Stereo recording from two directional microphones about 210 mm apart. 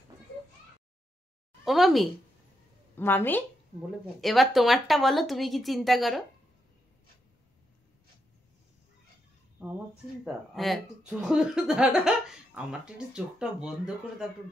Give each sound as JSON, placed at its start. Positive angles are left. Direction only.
{"t": 1.6, "sound": "a sound", "side_deg": 0}
{"t": 3.0, "sound": "speech", "side_deg": 10}
{"t": 9.6, "sound": "speech", "side_deg": -5}